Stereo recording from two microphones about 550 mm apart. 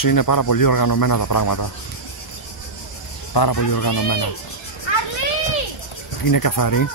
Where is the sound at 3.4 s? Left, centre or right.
Left.